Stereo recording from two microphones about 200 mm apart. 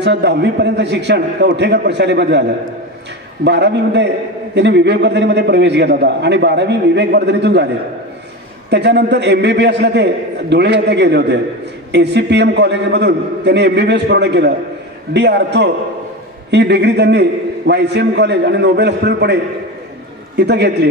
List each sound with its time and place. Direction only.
0.0 s a man's voice: 60° right (ahead or behind)
3.4 s a man's voice: 60° right (ahead or behind)
8.6 s a man's voice: 60° right (ahead or behind)
20.3 s a man's voice: 55° right (ahead or behind)